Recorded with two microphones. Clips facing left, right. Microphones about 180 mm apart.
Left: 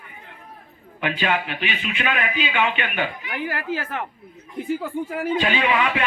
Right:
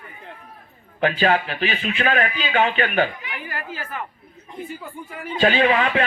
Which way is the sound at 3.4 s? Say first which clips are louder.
Left 8 dB; 80° left.